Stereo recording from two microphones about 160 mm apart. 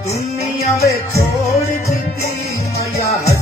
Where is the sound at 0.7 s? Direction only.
20° left (ahead or behind).